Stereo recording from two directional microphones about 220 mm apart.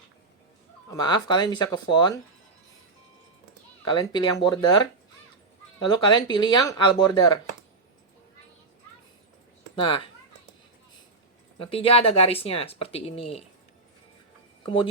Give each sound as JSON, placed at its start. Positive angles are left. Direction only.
{"t": 0.9, "sound": "speech", "side_deg": 20}
{"t": 3.9, "sound": "speech", "side_deg": 20}
{"t": 9.8, "sound": "speech", "side_deg": 25}
{"t": 11.6, "sound": "speech", "side_deg": 25}
{"t": 14.6, "sound": "speech", "side_deg": 20}